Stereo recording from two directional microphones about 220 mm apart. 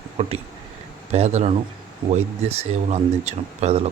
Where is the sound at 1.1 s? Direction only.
30° right (ahead or behind).